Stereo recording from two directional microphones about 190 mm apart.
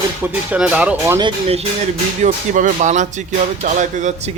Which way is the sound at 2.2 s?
40° right (ahead or behind).